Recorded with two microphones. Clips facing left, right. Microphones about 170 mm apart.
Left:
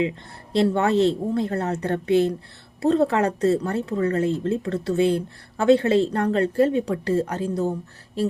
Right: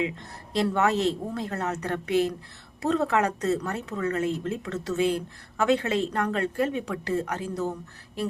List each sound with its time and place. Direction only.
0.5 s speech: 30° left (ahead or behind)